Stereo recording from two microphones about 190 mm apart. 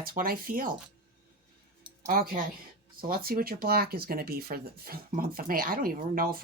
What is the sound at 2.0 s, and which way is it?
Speech, 50° right (ahead or behind).